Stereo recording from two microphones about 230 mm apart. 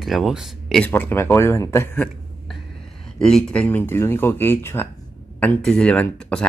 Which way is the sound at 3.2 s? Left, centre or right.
Centre.